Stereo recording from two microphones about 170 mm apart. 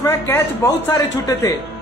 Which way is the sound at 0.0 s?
15° left (ahead or behind).